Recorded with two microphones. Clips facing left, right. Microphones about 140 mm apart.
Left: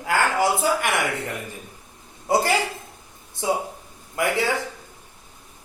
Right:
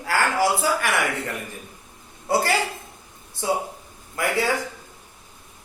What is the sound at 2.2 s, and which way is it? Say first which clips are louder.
Speech: left 1 dB; 20° left (ahead or behind).